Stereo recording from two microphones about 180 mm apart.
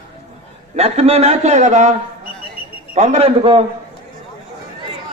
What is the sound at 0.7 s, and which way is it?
A man's voice, 35° right (ahead or behind).